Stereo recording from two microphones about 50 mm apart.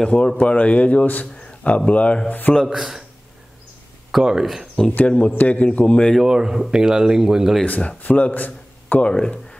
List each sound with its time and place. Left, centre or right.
0.0 s a man's voice: centre
1.2 s a sound: left
1.9 s a man's voice: left
2.7 s speech: centre
4.1 s speech: centre
4.9 s a man's voice: left
6.2 s speech: centre
7.6 s a man's voice: left
9.0 s speech: left